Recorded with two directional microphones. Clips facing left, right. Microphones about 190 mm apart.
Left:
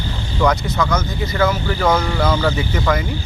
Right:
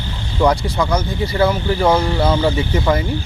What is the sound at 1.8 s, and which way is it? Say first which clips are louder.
Speech: right 2 dB; 10° right (ahead or behind).